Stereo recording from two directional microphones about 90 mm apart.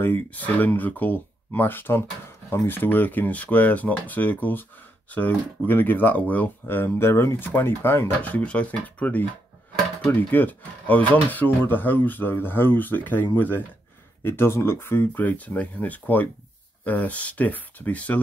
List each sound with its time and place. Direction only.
0.0 s speech: 20° left (ahead or behind)
10.3 s speech: 20° left (ahead or behind)